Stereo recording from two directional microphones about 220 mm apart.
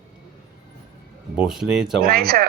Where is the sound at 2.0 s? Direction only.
40° right (ahead or behind).